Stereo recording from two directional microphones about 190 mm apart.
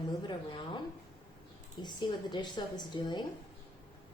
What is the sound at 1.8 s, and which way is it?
A woman's voice, 25° left (ahead or behind).